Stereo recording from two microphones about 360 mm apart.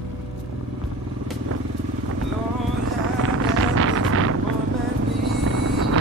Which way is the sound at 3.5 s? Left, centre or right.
Right.